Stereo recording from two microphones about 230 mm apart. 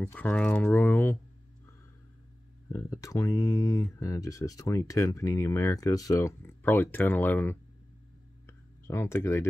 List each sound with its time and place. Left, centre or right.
0.0 s speech: centre
2.7 s speech: centre
8.5 s a sound: centre